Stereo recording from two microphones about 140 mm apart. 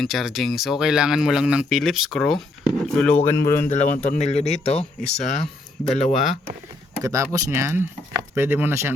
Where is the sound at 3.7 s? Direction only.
60° left (ahead or behind).